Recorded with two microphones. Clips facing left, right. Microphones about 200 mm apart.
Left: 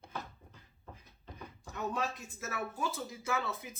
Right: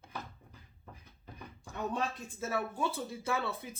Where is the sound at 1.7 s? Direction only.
30° right (ahead or behind).